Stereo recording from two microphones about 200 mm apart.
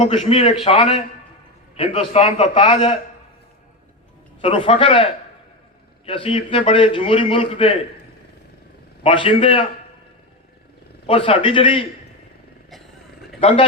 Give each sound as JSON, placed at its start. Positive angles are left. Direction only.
{"t": 0.1, "sound": "a man's voice", "side_deg": 30}
{"t": 4.4, "sound": "a man's voice", "side_deg": 25}
{"t": 6.1, "sound": "a man's voice", "side_deg": 25}
{"t": 9.0, "sound": "a man's voice", "side_deg": 25}
{"t": 11.0, "sound": "a man's voice", "side_deg": 25}